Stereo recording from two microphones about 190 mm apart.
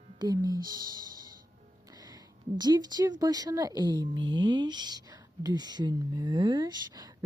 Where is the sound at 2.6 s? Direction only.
20° right (ahead or behind).